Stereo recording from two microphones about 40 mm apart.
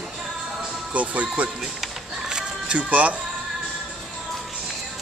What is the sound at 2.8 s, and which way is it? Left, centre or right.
Speech, right.